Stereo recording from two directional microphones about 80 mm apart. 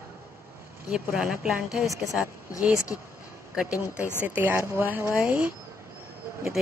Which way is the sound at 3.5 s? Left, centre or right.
Centre.